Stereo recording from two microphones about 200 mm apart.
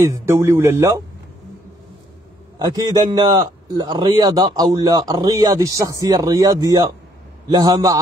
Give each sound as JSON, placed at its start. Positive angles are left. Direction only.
{"t": 0.0, "sound": "speech", "side_deg": -15}
{"t": 2.6, "sound": "a man's voice", "side_deg": -20}